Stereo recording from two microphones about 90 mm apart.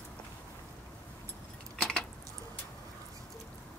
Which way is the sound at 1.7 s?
5° left (ahead or behind).